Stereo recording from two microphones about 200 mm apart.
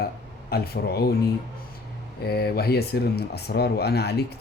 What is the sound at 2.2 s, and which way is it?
Speech, 50° left (ahead or behind).